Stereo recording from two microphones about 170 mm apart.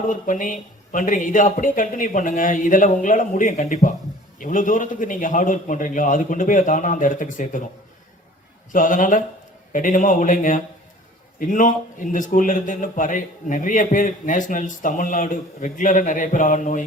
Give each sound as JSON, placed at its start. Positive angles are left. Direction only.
{"t": 0.1, "sound": "a man's voice", "side_deg": 50}
{"t": 8.7, "sound": "a man's voice", "side_deg": 50}